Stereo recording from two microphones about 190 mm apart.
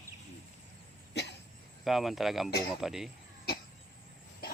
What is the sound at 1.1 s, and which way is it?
Cough, 65° left (ahead or behind).